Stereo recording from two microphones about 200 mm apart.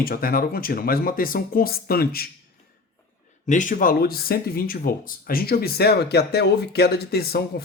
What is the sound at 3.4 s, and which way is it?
Speech, 40° left (ahead or behind).